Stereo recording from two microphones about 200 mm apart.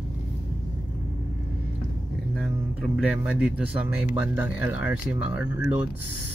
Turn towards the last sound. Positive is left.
turn(degrees=-5)  # may be behind; listen again after turning